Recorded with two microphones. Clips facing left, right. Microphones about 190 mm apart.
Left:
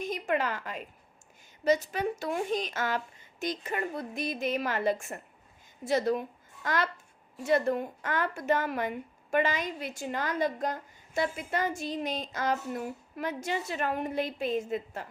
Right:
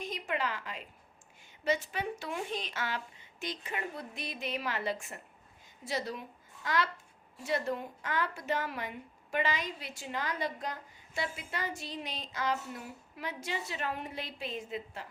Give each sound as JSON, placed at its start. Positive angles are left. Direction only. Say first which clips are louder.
{"t": 0.0, "sound": "a woman's voice", "louder": "left 5 dB", "side_deg": 45}